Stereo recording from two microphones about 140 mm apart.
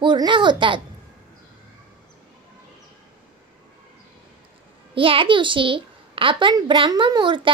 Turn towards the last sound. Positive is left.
turn(degrees=-35)  # may be behind; listen again after turning